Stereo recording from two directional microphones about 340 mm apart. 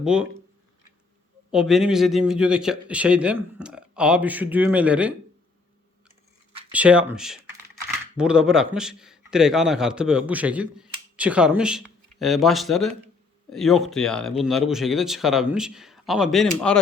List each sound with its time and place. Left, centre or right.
0.0 s a man's voice: centre
1.5 s a man's voice: centre
6.7 s a man's voice: centre